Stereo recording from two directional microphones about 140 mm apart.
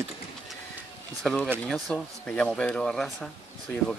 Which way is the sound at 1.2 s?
Centre (ahead or behind).